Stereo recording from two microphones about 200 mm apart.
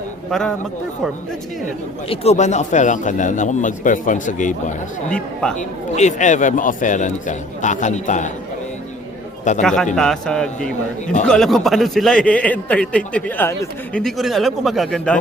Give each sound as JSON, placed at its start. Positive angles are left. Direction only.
{"t": 0.3, "sound": "a man's voice", "side_deg": 0}
{"t": 2.0, "sound": "a man's voice", "side_deg": 35}
{"t": 5.0, "sound": "a man's voice", "side_deg": 5}
{"t": 5.5, "sound": "a man's voice", "side_deg": 35}
{"t": 9.4, "sound": "a man's voice", "side_deg": 35}
{"t": 9.6, "sound": "a man's voice", "side_deg": 5}
{"t": 14.0, "sound": "a man's voice", "side_deg": 0}